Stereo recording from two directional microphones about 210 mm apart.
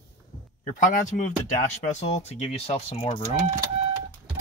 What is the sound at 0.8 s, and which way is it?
Speech, 40° left (ahead or behind).